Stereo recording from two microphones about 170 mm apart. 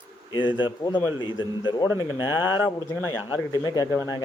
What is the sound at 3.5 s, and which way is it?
Speech, 20° left (ahead or behind).